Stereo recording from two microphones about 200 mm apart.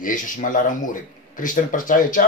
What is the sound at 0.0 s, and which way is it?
Speech, 40° left (ahead or behind).